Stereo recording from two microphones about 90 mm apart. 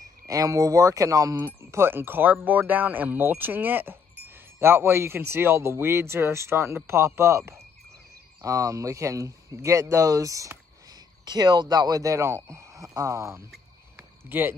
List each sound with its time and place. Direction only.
0.3 s speech: 40° right (ahead or behind)
1.4 s speech: 25° right (ahead or behind)
11.2 s speech: 55° right (ahead or behind); by 13.4 s 35° right (ahead or behind)
13.9 s a sound: 25° right (ahead or behind)